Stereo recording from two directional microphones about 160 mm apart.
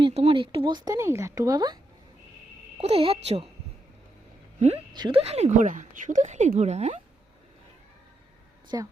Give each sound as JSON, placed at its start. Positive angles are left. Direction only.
{"t": 0.0, "sound": "speech", "side_deg": -35}
{"t": 2.7, "sound": "speech", "side_deg": -40}
{"t": 4.9, "sound": "speech", "side_deg": -30}
{"t": 5.2, "sound": "speech", "side_deg": -40}
{"t": 8.7, "sound": "speech", "side_deg": -20}